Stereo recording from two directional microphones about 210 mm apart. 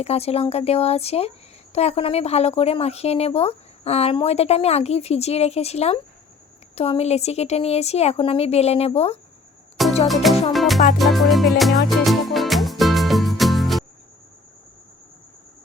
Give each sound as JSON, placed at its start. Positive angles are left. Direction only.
{"t": 0.0, "sound": "a woman's voice", "side_deg": 30}
{"t": 10.1, "sound": "music", "side_deg": 0}